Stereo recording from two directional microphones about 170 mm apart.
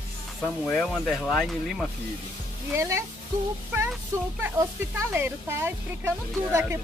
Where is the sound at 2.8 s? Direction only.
15° right (ahead or behind).